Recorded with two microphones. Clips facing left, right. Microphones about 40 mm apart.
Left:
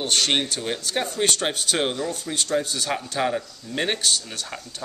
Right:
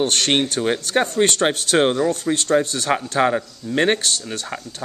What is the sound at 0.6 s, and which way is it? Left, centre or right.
Speech, right.